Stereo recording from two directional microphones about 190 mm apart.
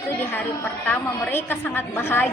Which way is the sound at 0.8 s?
10° left (ahead or behind).